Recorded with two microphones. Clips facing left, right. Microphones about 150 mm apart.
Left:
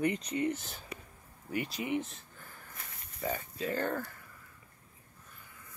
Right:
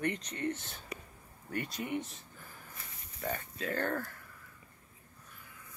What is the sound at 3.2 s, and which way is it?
Speech, centre (ahead or behind).